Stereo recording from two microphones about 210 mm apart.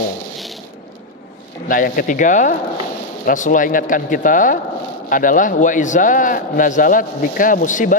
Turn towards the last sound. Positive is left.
turn(degrees=35)  # may be behind; listen again after turning